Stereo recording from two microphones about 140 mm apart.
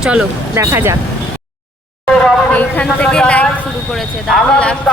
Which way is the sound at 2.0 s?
5° left (ahead or behind).